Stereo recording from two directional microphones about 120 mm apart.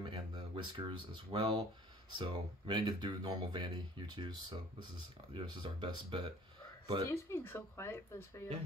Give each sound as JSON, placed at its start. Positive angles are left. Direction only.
{"t": 0.0, "sound": "speech", "side_deg": -40}
{"t": 7.1, "sound": "speech", "side_deg": 20}